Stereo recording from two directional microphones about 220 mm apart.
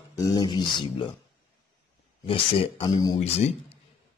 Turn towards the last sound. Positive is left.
turn(degrees=25)  # may be behind; listen again after turning